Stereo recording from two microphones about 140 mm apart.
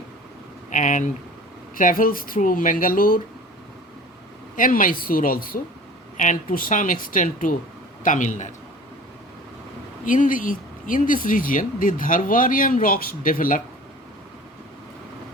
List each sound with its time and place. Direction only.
0.7 s speech: 65° left (ahead or behind)
1.7 s speech: 80° left
4.5 s speech: 75° left (ahead or behind)
6.1 s a man's voice: 70° left (ahead or behind)
10.1 s speech: 75° left (ahead or behind)